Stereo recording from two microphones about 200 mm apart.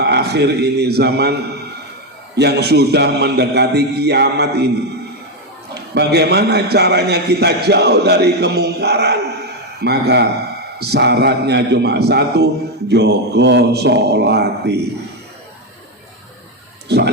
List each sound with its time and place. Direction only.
0.0 s a man's voice: 55° right (ahead or behind)
5.7 s a man's voice: 55° right (ahead or behind)
16.9 s speech: 55° right (ahead or behind)